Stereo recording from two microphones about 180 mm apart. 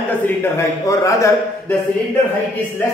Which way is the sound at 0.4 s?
15° left (ahead or behind).